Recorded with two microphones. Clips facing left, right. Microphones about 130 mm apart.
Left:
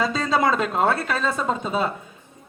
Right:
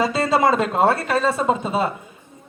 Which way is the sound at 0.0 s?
5° right (ahead or behind).